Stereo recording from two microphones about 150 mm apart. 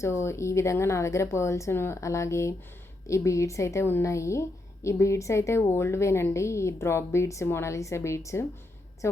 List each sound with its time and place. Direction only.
0.0 s a woman's voice: 15° left (ahead or behind)